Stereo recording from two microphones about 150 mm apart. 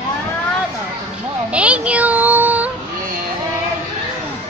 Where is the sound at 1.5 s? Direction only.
10° right (ahead or behind).